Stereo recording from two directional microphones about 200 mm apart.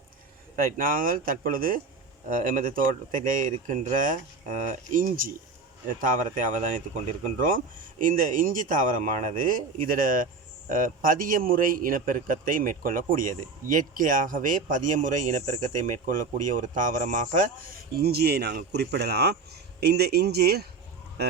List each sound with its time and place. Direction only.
0.5 s a man's voice: 45° right (ahead or behind)
18.0 s speech: 50° right (ahead or behind)